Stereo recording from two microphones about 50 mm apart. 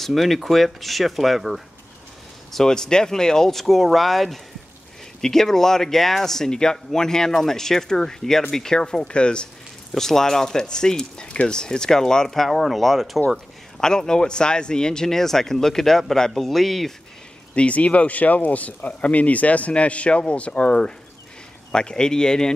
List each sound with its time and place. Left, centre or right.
0.0 s speech: centre
2.5 s speech: centre
9.9 s speech: centre
13.7 s speech: centre
17.6 s speech: left